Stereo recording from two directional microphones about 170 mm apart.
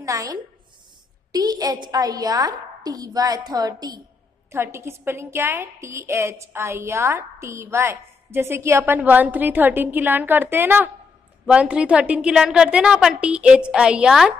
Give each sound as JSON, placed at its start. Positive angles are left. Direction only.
{"t": 0.0, "sound": "a woman's voice", "side_deg": -20}